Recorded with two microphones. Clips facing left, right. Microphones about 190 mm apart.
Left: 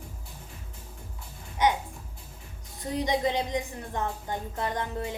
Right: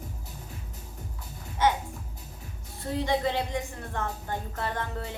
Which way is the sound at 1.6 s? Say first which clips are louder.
Even; 15° left (ahead or behind).